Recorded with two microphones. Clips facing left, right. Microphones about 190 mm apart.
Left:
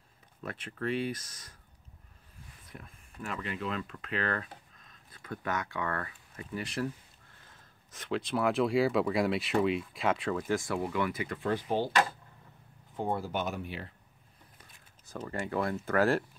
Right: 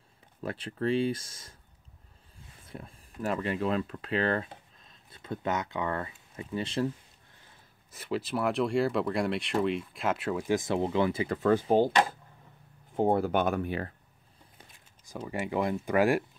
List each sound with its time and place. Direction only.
0.4 s speech: 30° right (ahead or behind)
7.9 s speech: 5° right (ahead or behind); by 11.3 s 30° right (ahead or behind)
11.3 s speech: 40° right (ahead or behind)
12.9 s speech: 55° right (ahead or behind)
15.0 s speech: 10° right (ahead or behind)